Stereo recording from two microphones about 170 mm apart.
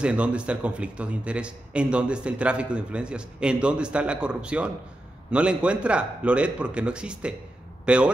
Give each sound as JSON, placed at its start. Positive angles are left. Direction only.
{"t": 0.0, "sound": "a man's voice", "side_deg": -5}